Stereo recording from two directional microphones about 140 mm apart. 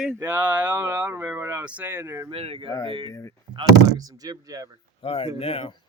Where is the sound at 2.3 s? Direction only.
45° right (ahead or behind).